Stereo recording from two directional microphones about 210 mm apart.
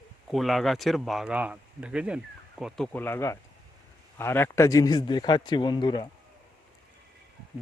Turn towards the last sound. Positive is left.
turn(degrees=20)  # may be behind; listen again after turning